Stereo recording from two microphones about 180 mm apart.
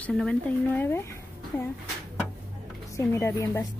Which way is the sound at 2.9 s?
15° left (ahead or behind).